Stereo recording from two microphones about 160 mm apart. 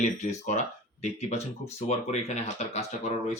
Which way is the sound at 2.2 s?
45° left (ahead or behind).